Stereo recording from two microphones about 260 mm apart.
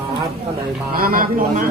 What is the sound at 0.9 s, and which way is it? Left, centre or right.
Speech, right.